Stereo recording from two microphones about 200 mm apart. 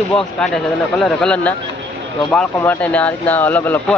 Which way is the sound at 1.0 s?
5° left (ahead or behind).